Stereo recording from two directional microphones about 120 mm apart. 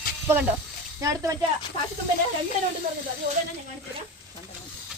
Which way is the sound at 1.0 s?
25° right (ahead or behind).